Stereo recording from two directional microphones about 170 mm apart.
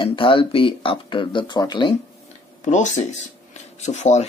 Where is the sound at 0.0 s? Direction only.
30° left (ahead or behind).